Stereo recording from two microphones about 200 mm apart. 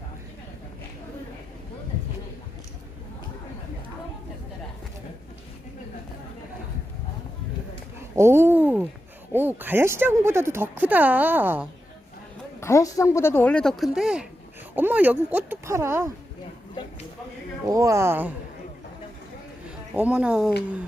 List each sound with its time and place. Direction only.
8.1 s a sound: 15° right (ahead or behind)
9.3 s speech: 10° right (ahead or behind)
12.5 s speech: 15° left (ahead or behind); by 16.1 s 15° right (ahead or behind)
16.8 s a sound: 20° left (ahead or behind)
17.7 s speech: 15° right (ahead or behind)
20.0 s speech: 5° right (ahead or behind)